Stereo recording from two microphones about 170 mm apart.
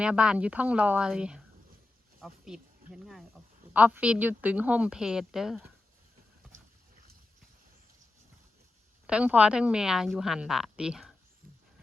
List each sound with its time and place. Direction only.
0.0 s a woman's voice: 5° right (ahead or behind)
9.0 s a woman's voice: 5° right (ahead or behind)